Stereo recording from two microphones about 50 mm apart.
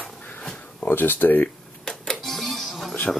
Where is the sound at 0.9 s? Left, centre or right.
Left.